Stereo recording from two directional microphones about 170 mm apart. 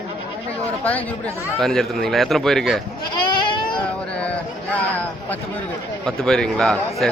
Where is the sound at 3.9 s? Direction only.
5° left (ahead or behind).